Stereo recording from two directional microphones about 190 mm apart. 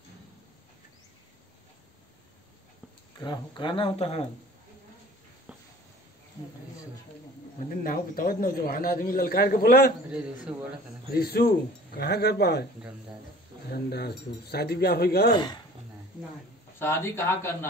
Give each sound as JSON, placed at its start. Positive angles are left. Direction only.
{"t": 3.2, "sound": "speech", "side_deg": 25}
{"t": 7.7, "sound": "speech", "side_deg": 50}
{"t": 10.5, "sound": "a man's voice", "side_deg": -10}
{"t": 11.1, "sound": "speech", "side_deg": 55}
{"t": 13.7, "sound": "speech", "side_deg": 55}
{"t": 16.7, "sound": "speech", "side_deg": 10}